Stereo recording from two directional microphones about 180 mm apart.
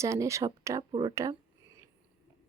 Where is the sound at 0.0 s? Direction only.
15° right (ahead or behind).